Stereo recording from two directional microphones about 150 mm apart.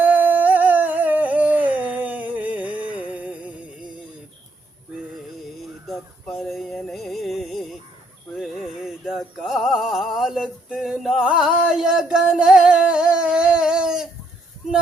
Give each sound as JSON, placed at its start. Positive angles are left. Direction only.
{"t": 0.0, "sound": "humming", "side_deg": -10}
{"t": 5.9, "sound": "music", "side_deg": 0}
{"t": 8.4, "sound": "a sound", "side_deg": 0}